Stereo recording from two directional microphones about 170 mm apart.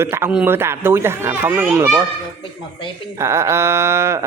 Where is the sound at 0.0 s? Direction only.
15° right (ahead or behind).